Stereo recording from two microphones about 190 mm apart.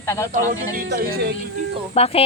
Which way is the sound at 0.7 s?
55° right (ahead or behind).